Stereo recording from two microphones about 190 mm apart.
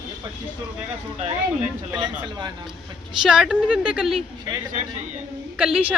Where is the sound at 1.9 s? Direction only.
25° right (ahead or behind).